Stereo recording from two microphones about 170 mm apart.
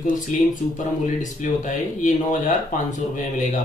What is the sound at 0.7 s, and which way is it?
Speech, 50° left (ahead or behind).